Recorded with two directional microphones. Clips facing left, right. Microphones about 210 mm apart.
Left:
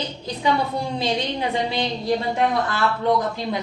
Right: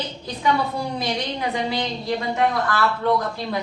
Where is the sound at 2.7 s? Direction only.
20° left (ahead or behind).